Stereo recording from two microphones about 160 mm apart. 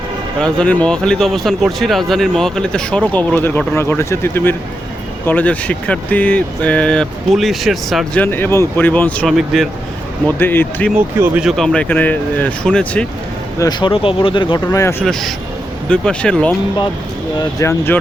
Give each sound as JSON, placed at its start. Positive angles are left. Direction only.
{"t": 0.3, "sound": "speech", "side_deg": 5}
{"t": 10.3, "sound": "speech", "side_deg": 15}
{"t": 11.2, "sound": "speech", "side_deg": -5}
{"t": 13.6, "sound": "speech", "side_deg": 30}
{"t": 14.7, "sound": "speech", "side_deg": 15}
{"t": 15.9, "sound": "speech", "side_deg": 5}
{"t": 17.3, "sound": "speech", "side_deg": 20}